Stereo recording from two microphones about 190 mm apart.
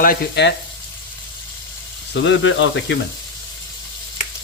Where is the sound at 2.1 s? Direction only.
70° left (ahead or behind).